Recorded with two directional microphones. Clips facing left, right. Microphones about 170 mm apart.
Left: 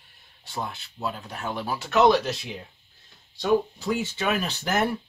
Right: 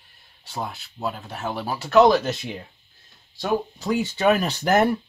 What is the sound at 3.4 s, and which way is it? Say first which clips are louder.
Speech: left 2 dB; 45° right (ahead or behind).